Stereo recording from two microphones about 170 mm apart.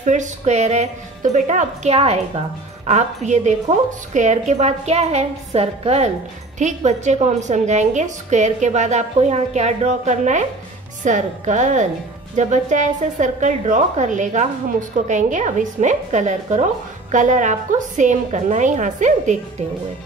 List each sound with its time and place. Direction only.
0.0 s a woman's voice: 45° right (ahead or behind)